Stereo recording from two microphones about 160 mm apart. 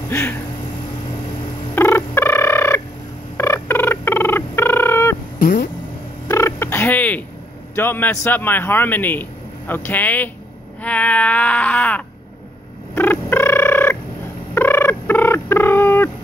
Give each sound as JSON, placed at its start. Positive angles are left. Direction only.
{"t": 0.1, "sound": "a man's voice", "side_deg": 15}
{"t": 1.8, "sound": "fowl", "side_deg": 15}
{"t": 3.3, "sound": "a sound", "side_deg": 15}
{"t": 5.4, "sound": "speech", "side_deg": 60}
{"t": 6.2, "sound": "turkey", "side_deg": 15}
{"t": 7.7, "sound": "a man's voice", "side_deg": 15}
{"t": 12.9, "sound": "a sound", "side_deg": 10}
{"t": 14.5, "sound": "fowl", "side_deg": 15}